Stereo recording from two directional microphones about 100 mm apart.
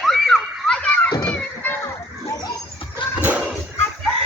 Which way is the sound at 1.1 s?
40° left (ahead or behind).